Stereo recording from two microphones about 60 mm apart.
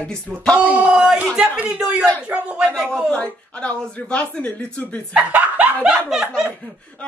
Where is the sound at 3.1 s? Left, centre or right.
Centre.